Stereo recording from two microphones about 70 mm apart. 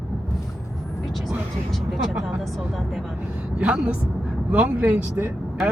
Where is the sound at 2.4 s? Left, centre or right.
Centre.